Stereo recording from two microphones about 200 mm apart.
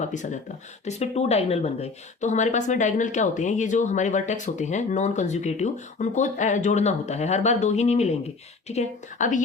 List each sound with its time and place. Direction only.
0.0 s a woman's voice: 35° left (ahead or behind)